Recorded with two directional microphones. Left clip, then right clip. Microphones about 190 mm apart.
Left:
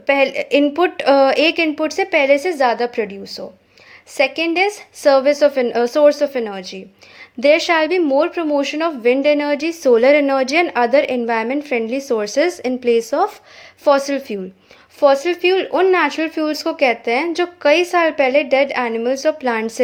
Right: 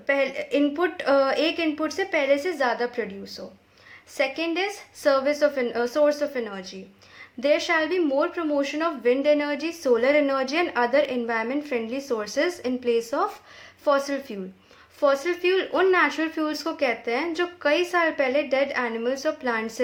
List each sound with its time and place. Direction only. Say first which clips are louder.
0.0 s a woman's voice: left 8 dB; 35° left (ahead or behind)